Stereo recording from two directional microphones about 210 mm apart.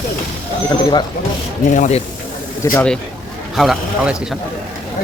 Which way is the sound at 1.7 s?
35° left (ahead or behind).